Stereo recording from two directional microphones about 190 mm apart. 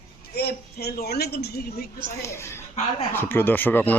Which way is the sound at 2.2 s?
15° left (ahead or behind).